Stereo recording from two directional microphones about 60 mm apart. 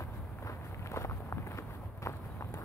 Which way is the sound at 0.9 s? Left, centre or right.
Left.